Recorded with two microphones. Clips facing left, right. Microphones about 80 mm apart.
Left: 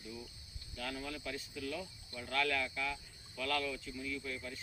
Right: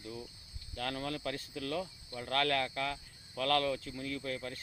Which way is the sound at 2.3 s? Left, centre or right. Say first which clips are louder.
Right 4 dB; right.